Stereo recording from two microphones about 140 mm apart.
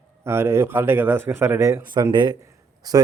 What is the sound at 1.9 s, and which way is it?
Speech, 30° right (ahead or behind).